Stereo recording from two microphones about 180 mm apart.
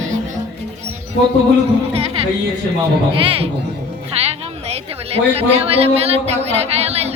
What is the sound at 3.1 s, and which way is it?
Speech, 30° right (ahead or behind).